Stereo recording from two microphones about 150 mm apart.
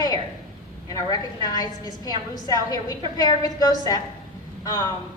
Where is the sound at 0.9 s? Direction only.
25° left (ahead or behind).